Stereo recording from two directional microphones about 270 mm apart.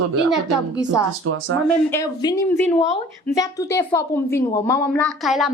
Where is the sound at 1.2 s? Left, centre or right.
Right.